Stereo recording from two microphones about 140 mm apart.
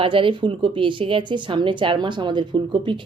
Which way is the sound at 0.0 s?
40° right (ahead or behind).